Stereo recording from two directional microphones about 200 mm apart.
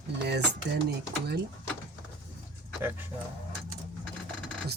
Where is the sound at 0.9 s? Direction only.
55° right (ahead or behind).